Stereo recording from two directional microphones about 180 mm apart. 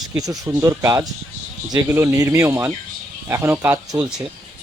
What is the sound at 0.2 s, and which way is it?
Speech, 20° right (ahead or behind).